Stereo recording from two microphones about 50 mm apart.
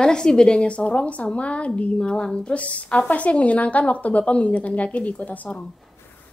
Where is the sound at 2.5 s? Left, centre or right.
Left.